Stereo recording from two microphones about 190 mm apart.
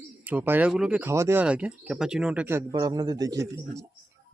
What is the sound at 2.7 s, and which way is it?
A man's voice, 20° right (ahead or behind).